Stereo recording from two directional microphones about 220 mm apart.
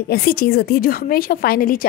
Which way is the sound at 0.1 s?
45° left (ahead or behind).